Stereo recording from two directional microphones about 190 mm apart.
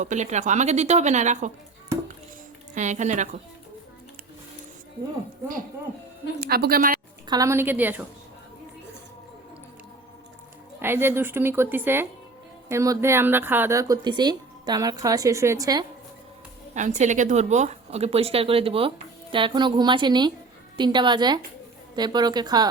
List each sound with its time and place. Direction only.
0.0 s a woman's voice: 40° right (ahead or behind)
2.7 s a woman's voice: 40° right (ahead or behind)
6.4 s a woman's voice: 55° right (ahead or behind)
7.3 s speech: 15° right (ahead or behind)
10.8 s speech: 10° right (ahead or behind)
16.7 s speech: 40° right (ahead or behind); by 22.7 s 20° right (ahead or behind)